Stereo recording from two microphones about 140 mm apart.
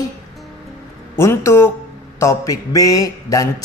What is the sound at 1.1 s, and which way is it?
Speech, 20° left (ahead or behind).